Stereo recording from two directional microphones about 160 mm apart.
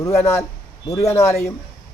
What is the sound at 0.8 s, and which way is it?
Speech, 20° left (ahead or behind).